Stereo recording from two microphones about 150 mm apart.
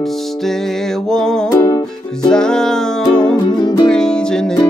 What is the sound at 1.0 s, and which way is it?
Music, 5° left (ahead or behind).